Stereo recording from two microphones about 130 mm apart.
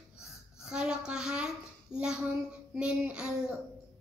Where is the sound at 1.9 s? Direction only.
5° right (ahead or behind).